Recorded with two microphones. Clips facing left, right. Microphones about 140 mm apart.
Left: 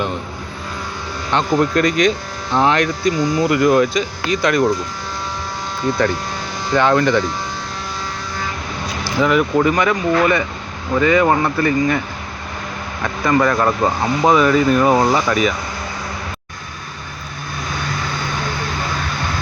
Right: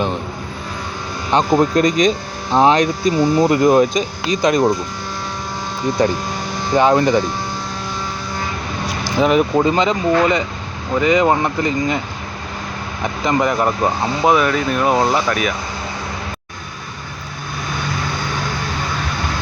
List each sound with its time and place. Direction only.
1.3 s speech: 20° right (ahead or behind)
6.7 s speech: 20° right (ahead or behind)
9.0 s speech: 20° right (ahead or behind)
14.3 s speech: centre (ahead or behind)